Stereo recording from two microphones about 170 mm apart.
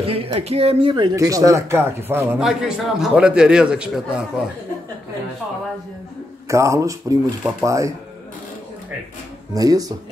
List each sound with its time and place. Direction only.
0.0 s speech: 35° right (ahead or behind); by 2.2 s 15° right (ahead or behind)
2.3 s a man's voice: centre (ahead or behind)
6.5 s speech: 15° right (ahead or behind)
9.5 s speech: 20° right (ahead or behind)